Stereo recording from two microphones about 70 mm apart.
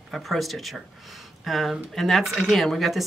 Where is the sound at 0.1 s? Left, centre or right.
Centre.